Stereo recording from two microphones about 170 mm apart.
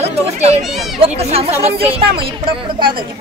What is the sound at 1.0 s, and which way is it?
A woman's voice, 35° right (ahead or behind).